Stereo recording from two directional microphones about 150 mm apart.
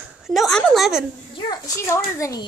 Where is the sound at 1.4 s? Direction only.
25° left (ahead or behind).